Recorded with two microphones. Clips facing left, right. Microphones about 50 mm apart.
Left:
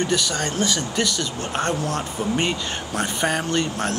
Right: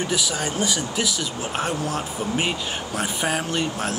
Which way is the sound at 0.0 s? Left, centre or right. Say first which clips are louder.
Left 2 dB; centre.